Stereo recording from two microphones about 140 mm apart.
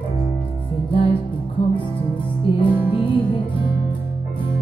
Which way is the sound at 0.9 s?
40° left (ahead or behind).